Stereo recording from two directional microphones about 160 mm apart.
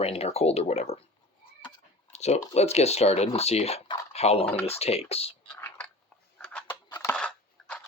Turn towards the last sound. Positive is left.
turn(degrees=5)  # may be behind; listen again after turning